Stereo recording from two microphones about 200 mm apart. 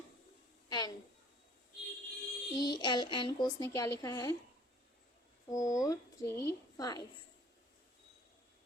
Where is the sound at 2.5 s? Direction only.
20° left (ahead or behind).